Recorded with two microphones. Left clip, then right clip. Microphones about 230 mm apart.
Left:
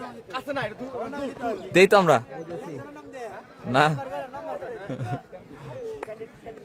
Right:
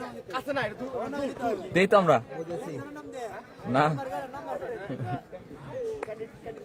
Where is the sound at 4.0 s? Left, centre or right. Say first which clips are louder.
Left 1 dB; right.